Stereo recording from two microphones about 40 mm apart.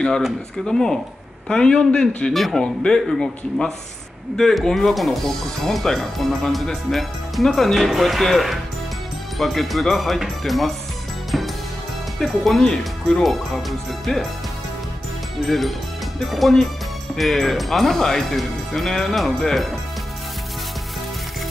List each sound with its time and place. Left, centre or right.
0.7 s speech: centre
1.5 s a man's voice: left
2.3 s speech: centre
2.6 s a man's voice: left; by 10.7 s centre
11.3 s music: centre
12.2 s speech: centre
13.2 s speech: centre
15.4 s speech: centre